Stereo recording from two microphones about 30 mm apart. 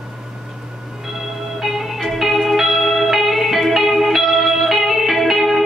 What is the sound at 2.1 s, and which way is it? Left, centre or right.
Music, centre.